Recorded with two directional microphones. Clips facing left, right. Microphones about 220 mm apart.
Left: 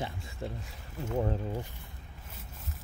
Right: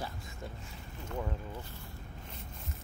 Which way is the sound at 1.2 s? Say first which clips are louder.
Left 7 dB; 35° left (ahead or behind).